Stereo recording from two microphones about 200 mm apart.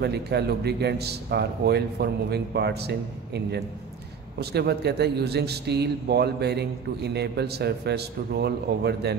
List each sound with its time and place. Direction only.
0.0 s speech: 55° right (ahead or behind)